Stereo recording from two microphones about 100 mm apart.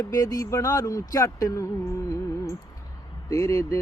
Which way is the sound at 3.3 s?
35° left (ahead or behind).